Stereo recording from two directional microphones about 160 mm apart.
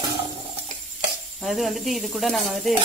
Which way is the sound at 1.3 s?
Centre (ahead or behind).